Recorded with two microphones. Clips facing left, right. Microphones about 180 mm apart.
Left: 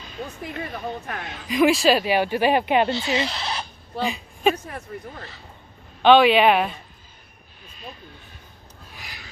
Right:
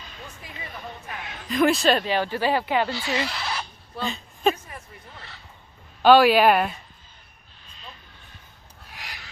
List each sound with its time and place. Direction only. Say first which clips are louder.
0.4 s speech: left 8 dB; 60° left (ahead or behind)
1.5 s speech: left 2 dB; centre (ahead or behind); by 3.6 s 20° left (ahead or behind)
4.0 s a woman's voice: left 2 dB; 5° left (ahead or behind)
4.6 s speech: left 9 dB; 65° left (ahead or behind)
6.0 s speech: left 1 dB; 5° right (ahead or behind)
9.0 s a sound: right 2 dB; 90° right